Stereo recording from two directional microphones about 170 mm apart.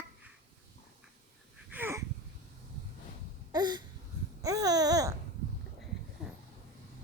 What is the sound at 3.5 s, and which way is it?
Wheeze, 25° right (ahead or behind).